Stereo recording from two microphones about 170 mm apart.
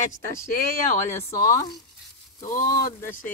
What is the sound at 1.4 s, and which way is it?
Speech, 20° left (ahead or behind).